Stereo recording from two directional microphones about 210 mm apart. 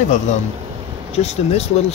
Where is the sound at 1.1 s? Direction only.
30° left (ahead or behind).